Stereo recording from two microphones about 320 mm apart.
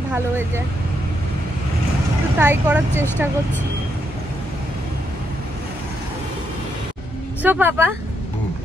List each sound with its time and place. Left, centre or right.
2.3 s speech: centre
7.4 s a woman's voice: centre